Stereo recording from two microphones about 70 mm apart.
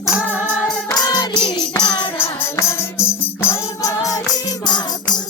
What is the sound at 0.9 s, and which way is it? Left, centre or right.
Music, left.